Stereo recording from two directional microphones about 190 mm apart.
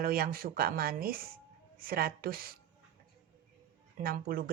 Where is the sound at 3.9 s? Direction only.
50° right (ahead or behind).